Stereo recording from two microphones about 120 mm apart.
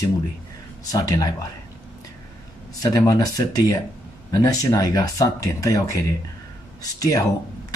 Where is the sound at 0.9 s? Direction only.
30° left (ahead or behind).